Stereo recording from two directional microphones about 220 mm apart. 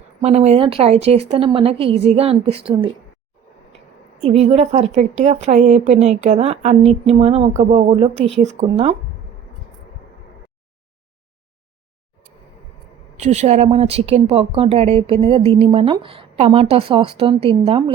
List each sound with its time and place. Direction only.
0.2 s speech: 30° right (ahead or behind)
4.2 s a woman's voice: 30° right (ahead or behind)
13.1 s speech: 30° right (ahead or behind)